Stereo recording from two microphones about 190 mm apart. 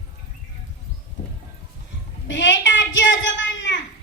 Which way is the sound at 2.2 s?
75° left (ahead or behind).